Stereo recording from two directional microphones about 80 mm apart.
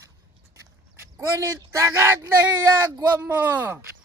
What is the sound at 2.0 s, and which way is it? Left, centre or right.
Speech, right.